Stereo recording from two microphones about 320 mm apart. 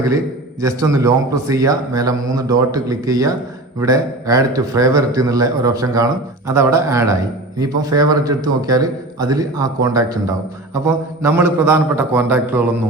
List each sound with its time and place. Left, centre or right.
0.6 s a man's voice: centre